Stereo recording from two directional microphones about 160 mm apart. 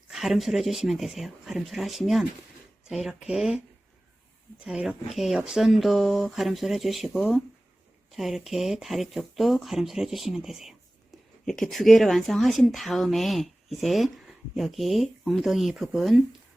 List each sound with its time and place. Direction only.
0.1 s speech: centre (ahead or behind)
4.6 s speech: 5° right (ahead or behind)